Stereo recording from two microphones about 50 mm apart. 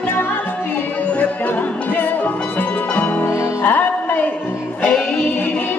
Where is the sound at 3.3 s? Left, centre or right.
Left.